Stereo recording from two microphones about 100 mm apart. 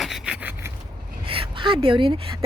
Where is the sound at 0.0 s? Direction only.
Centre (ahead or behind).